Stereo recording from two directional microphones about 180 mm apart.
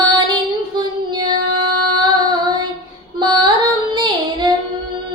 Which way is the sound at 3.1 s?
25° right (ahead or behind).